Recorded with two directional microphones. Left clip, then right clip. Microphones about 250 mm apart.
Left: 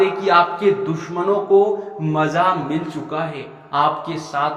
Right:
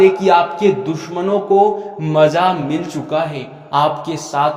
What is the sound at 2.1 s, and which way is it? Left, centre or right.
A man's voice, right.